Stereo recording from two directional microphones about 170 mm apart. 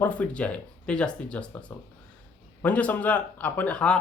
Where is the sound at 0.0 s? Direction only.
10° left (ahead or behind).